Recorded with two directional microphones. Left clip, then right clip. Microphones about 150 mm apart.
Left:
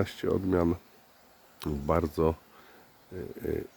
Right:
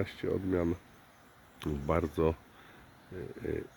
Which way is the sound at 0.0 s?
25° left (ahead or behind).